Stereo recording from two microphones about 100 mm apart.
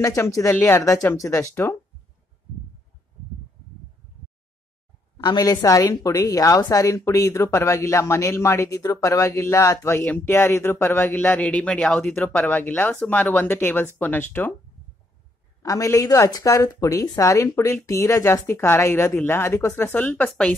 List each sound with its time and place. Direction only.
0.0 s a woman's voice: 35° left (ahead or behind)
5.1 s a woman's voice: 50° left (ahead or behind); by 14.5 s 20° left (ahead or behind)
15.6 s a woman's voice: 35° left (ahead or behind); by 20.5 s 10° left (ahead or behind)